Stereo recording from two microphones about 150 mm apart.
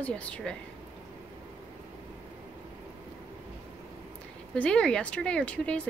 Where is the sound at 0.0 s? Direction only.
10° left (ahead or behind).